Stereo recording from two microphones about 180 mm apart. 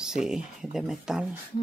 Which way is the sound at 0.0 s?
5° right (ahead or behind).